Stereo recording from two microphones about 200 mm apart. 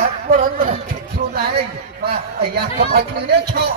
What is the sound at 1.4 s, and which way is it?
A man's voice, 50° right (ahead or behind).